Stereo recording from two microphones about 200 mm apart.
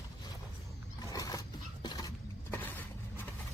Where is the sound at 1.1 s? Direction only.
15° left (ahead or behind).